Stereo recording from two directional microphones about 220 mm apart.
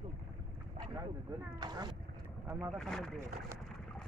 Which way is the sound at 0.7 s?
15° right (ahead or behind).